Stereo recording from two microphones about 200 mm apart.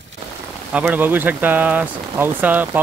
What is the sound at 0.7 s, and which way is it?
Speech, 5° right (ahead or behind).